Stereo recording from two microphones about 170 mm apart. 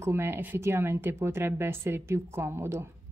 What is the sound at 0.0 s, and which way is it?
A woman's voice, 15° right (ahead or behind).